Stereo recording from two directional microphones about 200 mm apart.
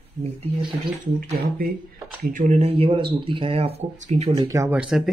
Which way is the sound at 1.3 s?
50° right (ahead or behind).